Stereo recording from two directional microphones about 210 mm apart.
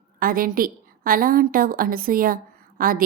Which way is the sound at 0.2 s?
45° right (ahead or behind).